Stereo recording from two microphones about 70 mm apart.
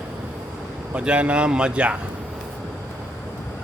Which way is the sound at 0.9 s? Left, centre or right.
Centre.